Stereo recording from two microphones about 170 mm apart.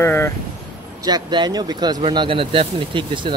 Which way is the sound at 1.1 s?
25° right (ahead or behind).